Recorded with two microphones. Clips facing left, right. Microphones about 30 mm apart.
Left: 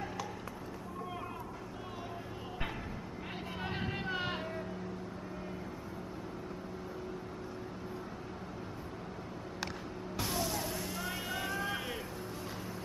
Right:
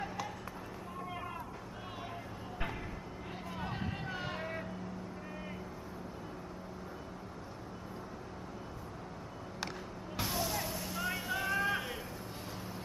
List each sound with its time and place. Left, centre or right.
3.5 s vehicle: left
10.1 s vehicle: centre